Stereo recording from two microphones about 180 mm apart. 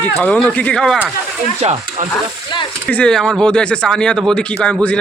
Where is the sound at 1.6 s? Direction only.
40° right (ahead or behind).